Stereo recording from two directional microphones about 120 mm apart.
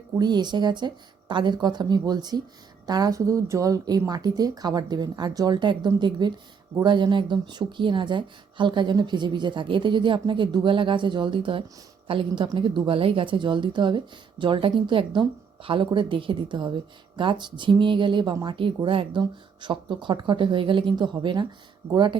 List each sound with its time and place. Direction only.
0.2 s a woman's voice: 35° right (ahead or behind)